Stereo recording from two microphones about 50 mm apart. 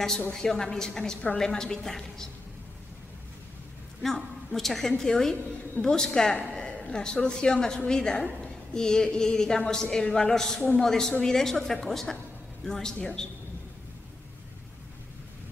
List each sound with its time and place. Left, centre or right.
0.3 s a woman's voice: centre
4.0 s a woman's voice: centre